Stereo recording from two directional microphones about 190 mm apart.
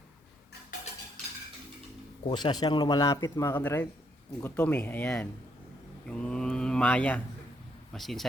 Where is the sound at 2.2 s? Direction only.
25° left (ahead or behind).